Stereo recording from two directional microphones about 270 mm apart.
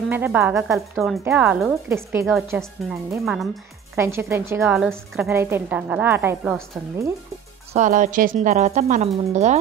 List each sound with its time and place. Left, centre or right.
0.1 s a woman's voice: centre
7.7 s speech: right